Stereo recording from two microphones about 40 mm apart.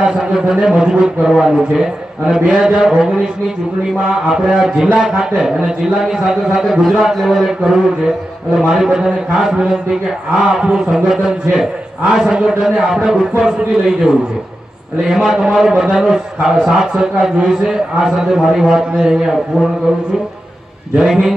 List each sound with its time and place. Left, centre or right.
0.0 s a man's voice: centre
6.1 s a man's voice: centre
21.0 s a man's voice: centre